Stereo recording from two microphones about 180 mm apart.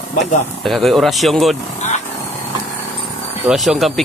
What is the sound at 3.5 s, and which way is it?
Speech, centre (ahead or behind).